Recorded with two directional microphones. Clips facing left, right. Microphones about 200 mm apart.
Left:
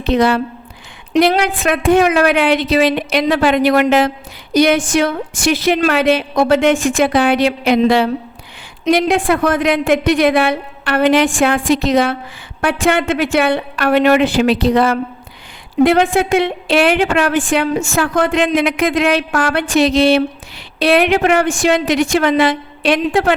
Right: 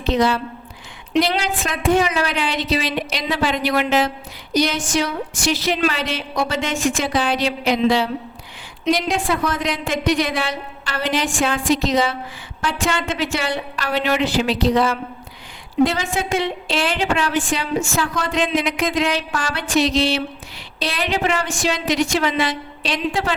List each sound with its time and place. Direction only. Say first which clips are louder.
0.0 s a woman's voice: left 5 dB; 60° left (ahead or behind)